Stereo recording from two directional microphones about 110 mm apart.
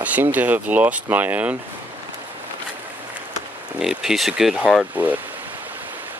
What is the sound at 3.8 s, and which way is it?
Speech, 5° right (ahead or behind).